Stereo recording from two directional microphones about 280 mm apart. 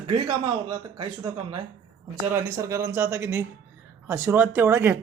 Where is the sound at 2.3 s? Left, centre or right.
Centre.